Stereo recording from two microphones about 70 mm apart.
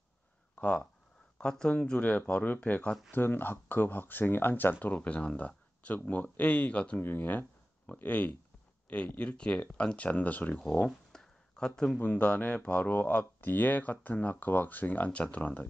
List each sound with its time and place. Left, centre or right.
0.6 s speech: centre
3.1 s speech: left
7.0 s speech: left
10.6 s a sound: centre
12.0 s speech: left